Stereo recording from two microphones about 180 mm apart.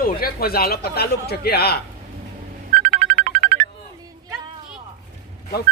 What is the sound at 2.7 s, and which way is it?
Music, 45° right (ahead or behind).